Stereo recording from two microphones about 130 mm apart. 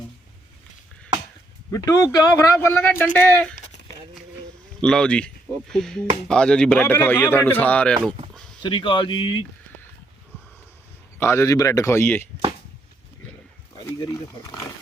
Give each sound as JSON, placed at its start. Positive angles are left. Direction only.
{"t": 1.7, "sound": "speech", "side_deg": 25}
{"t": 2.6, "sound": "speech", "side_deg": 20}
{"t": 8.3, "sound": "a sound", "side_deg": 5}
{"t": 8.6, "sound": "speech", "side_deg": 40}
{"t": 11.2, "sound": "speech", "side_deg": 20}
{"t": 13.8, "sound": "speech", "side_deg": 25}